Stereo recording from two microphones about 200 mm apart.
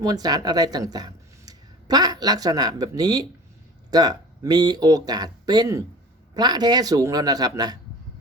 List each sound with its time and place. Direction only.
0.0 s speech: 20° right (ahead or behind)